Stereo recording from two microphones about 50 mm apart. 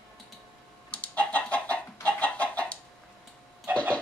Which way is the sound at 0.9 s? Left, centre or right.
Left.